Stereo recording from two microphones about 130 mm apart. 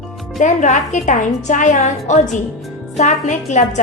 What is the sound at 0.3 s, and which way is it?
A woman's voice, 70° left (ahead or behind).